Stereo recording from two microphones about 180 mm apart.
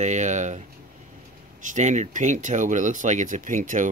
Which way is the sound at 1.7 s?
40° right (ahead or behind).